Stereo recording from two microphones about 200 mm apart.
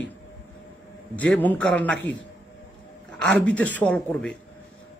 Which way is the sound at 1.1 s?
10° left (ahead or behind).